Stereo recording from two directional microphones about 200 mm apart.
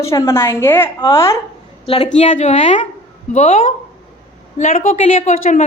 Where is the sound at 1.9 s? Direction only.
35° left (ahead or behind).